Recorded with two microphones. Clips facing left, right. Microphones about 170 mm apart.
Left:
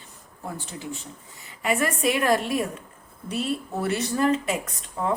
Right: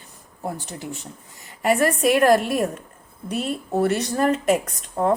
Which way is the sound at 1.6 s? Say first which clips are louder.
Right 5 dB; 45° right (ahead or behind).